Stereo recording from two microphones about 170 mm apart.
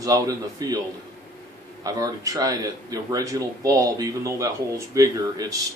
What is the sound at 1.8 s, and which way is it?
Speech, 20° right (ahead or behind).